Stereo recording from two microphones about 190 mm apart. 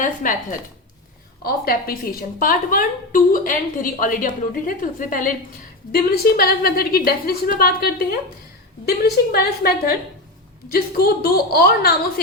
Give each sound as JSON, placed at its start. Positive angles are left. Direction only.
{"t": 0.0, "sound": "a woman's voice", "side_deg": 45}
{"t": 1.4, "sound": "a woman's voice", "side_deg": 50}